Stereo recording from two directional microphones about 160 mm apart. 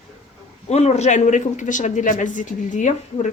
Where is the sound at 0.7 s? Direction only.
45° left (ahead or behind).